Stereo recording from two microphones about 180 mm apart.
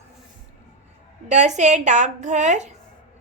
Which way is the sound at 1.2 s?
40° right (ahead or behind).